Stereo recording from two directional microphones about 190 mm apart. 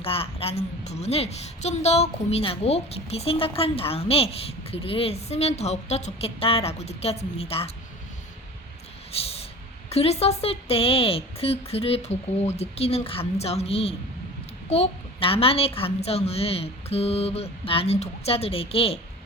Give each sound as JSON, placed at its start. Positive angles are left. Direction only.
{"t": 0.0, "sound": "a woman's voice", "side_deg": 30}
{"t": 9.1, "sound": "a sound", "side_deg": 30}
{"t": 9.9, "sound": "a woman's voice", "side_deg": 35}